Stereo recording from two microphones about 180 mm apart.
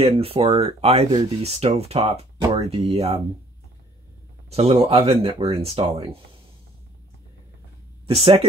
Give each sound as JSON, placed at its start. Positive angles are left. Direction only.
{"t": 0.0, "sound": "speech", "side_deg": -35}
{"t": 4.5, "sound": "speech", "side_deg": -35}
{"t": 8.1, "sound": "speech", "side_deg": -30}